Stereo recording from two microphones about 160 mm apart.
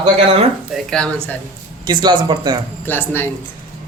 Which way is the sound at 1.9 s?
30° right (ahead or behind).